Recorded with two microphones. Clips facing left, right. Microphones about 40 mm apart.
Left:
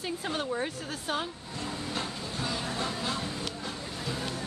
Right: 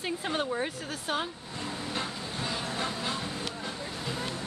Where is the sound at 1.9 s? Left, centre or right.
Centre.